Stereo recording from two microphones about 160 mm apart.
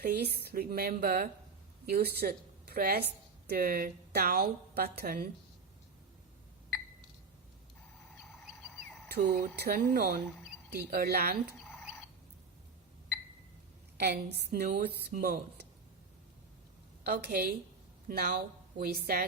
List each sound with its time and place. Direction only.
0.0 s a woman's voice: 80° right
9.0 s a woman's voice: 70° right (ahead or behind)
10.7 s a woman's voice: 75° right (ahead or behind)
11.8 s chicken: 5° right (ahead or behind)
14.0 s a woman's voice: 80° right
17.1 s a woman's voice: 70° right (ahead or behind)
18.1 s speech: 60° right (ahead or behind)
18.8 s a woman's voice: 70° right (ahead or behind)